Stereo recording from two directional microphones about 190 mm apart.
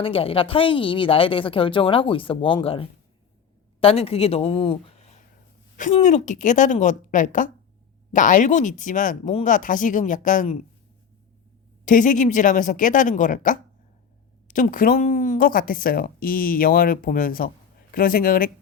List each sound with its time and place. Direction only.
0.0 s a woman's voice: 30° left (ahead or behind)
11.9 s speech: 45° left (ahead or behind)